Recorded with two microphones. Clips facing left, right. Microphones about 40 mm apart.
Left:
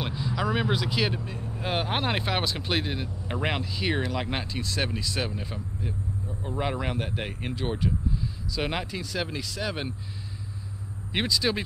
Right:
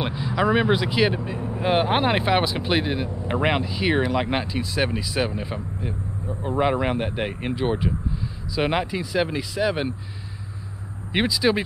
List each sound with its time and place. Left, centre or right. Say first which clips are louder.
0.0 s speech: right 6 dB; centre
11.1 s speech: right 5 dB; centre